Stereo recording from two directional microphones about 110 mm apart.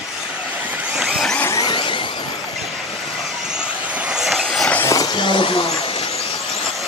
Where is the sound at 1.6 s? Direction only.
50° left (ahead or behind).